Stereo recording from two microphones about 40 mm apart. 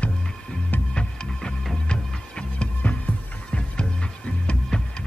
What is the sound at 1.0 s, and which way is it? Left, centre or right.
Music, left.